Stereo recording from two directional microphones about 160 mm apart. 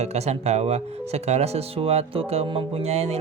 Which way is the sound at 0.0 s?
40° right (ahead or behind).